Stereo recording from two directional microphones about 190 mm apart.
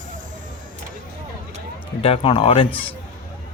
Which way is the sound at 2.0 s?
30° left (ahead or behind).